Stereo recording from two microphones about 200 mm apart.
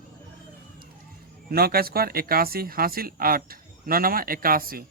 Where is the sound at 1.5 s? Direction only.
50° right (ahead or behind).